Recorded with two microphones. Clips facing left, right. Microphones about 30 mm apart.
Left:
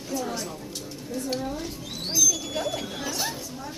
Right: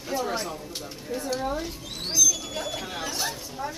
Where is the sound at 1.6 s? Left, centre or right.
Centre.